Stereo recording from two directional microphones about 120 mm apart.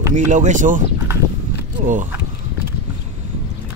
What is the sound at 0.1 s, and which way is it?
Speech, 90° right.